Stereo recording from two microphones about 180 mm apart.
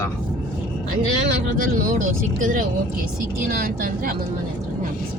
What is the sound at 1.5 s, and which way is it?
Speech, 50° right (ahead or behind).